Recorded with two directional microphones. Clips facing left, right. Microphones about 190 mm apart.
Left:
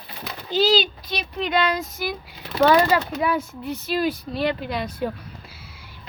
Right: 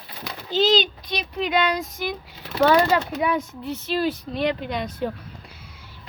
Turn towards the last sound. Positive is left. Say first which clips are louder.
# left 1 dB
turn(degrees=10)  # may be behind; listen again after turning